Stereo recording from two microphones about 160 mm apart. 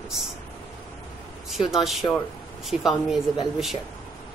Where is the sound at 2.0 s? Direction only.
25° left (ahead or behind).